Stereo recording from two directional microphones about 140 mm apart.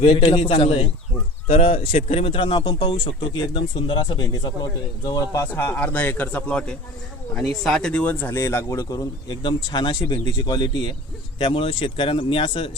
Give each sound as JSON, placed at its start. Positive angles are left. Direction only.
{"t": 0.0, "sound": "a man's voice", "side_deg": 45}